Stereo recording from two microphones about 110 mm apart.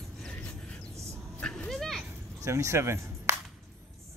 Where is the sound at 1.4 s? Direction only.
5° left (ahead or behind).